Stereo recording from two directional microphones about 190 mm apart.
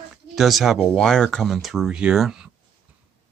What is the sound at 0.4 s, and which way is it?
Speech, centre (ahead or behind).